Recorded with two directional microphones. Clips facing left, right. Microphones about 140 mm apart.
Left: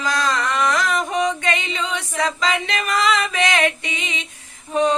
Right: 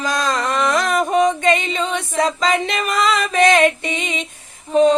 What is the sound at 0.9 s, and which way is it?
Female singing, 40° right (ahead or behind).